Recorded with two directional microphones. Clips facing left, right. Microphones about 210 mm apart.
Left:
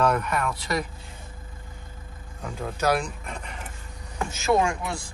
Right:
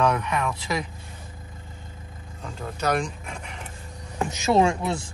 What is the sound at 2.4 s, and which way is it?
Speech, 5° left (ahead or behind).